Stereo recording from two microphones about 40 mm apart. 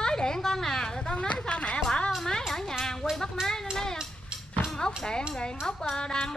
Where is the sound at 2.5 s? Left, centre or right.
Centre.